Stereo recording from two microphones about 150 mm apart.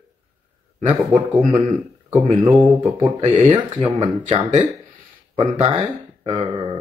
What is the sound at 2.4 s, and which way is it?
Speech, 25° right (ahead or behind).